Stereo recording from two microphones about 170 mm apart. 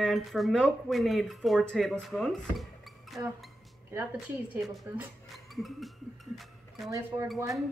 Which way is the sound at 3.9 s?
10° right (ahead or behind).